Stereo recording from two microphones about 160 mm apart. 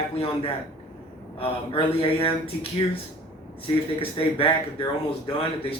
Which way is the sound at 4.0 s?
35° left (ahead or behind).